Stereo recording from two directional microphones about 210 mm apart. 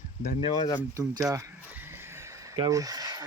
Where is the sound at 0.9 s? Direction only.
15° right (ahead or behind).